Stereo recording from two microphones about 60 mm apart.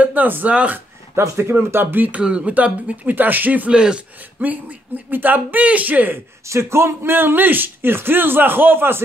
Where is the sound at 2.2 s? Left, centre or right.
Centre.